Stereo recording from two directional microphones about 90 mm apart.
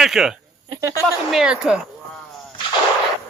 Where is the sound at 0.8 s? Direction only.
35° right (ahead or behind).